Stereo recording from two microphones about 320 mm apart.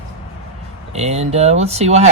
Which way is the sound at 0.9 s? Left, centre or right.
Centre.